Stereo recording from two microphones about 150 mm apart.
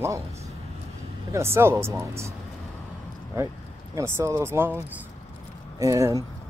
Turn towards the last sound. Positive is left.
turn(degrees=-20)  # may be behind; listen again after turning